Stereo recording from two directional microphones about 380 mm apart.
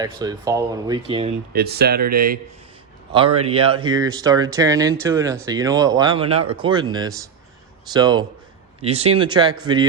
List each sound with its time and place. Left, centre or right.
0.0 s speech: centre
1.5 s speech: right